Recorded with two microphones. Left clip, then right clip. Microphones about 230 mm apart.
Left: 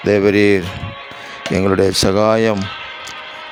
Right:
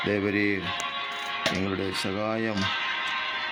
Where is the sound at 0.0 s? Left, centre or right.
Left.